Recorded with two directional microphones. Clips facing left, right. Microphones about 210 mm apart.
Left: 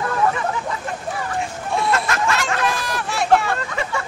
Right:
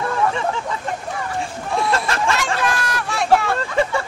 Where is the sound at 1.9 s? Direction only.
30° right (ahead or behind).